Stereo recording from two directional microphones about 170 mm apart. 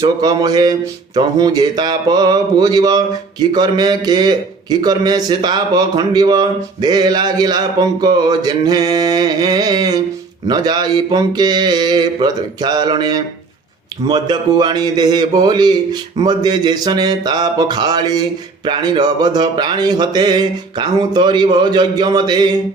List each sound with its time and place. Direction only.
0.0 s a man's voice: 20° right (ahead or behind)